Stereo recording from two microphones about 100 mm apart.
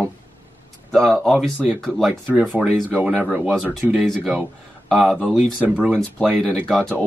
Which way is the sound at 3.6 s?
5° left (ahead or behind).